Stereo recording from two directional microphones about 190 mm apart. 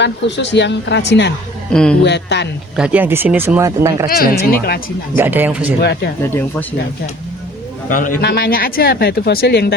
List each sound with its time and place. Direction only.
0.0 s speech: 70° left (ahead or behind)
1.7 s speech: 5° left (ahead or behind)
2.0 s speech: 65° left (ahead or behind)
2.7 s speech: 5° right (ahead or behind)
4.1 s speech: 50° left (ahead or behind)
5.1 s speech: 10° right (ahead or behind)
5.8 s speech: 60° left (ahead or behind)
7.9 s a man's voice: 45° left (ahead or behind)